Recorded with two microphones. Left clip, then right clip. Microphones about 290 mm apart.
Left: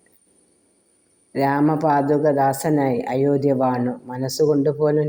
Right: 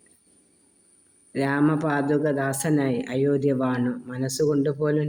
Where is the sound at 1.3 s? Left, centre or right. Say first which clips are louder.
Left 4 dB; centre.